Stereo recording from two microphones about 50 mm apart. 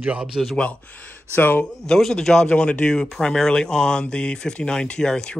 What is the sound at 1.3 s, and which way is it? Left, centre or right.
Speech, left.